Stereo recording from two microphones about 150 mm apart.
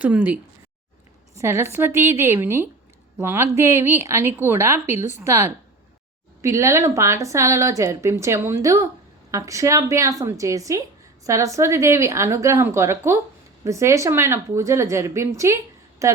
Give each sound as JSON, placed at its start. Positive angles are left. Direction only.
{"t": 0.0, "sound": "speech", "side_deg": -10}
{"t": 1.4, "sound": "a woman's voice", "side_deg": -20}